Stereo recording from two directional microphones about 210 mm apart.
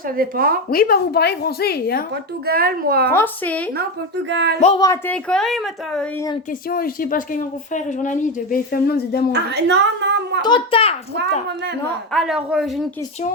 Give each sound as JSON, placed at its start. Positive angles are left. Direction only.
{"t": 0.2, "sound": "speech", "side_deg": -45}
{"t": 0.7, "sound": "speech", "side_deg": 45}
{"t": 2.5, "sound": "speech", "side_deg": -45}
{"t": 3.1, "sound": "a woman's voice", "side_deg": 10}
{"t": 4.3, "sound": "speech", "side_deg": -55}
{"t": 4.8, "sound": "speech", "side_deg": 10}
{"t": 6.7, "sound": "speech", "side_deg": 45}
{"t": 9.3, "sound": "speech", "side_deg": -55}
{"t": 10.4, "sound": "a child's voice", "side_deg": 25}
{"t": 12.1, "sound": "speech", "side_deg": 0}